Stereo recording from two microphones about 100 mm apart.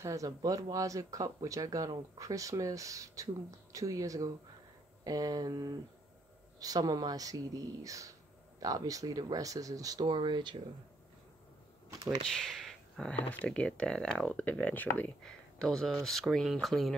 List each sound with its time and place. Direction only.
0.0 s speech: 35° right (ahead or behind); by 10.6 s 50° right (ahead or behind)
12.4 s speech: centre (ahead or behind); by 15.1 s 15° left (ahead or behind)
15.2 s speech: 5° left (ahead or behind)